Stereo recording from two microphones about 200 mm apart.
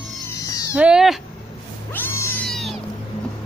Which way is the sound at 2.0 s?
10° left (ahead or behind).